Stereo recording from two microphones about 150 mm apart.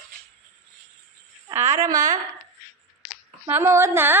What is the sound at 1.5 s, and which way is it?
Speech, 15° right (ahead or behind).